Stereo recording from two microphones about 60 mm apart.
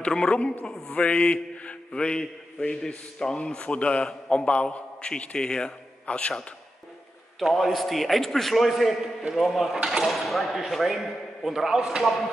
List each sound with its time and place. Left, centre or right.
0.0 s a man's voice: centre
7.3 s speech: centre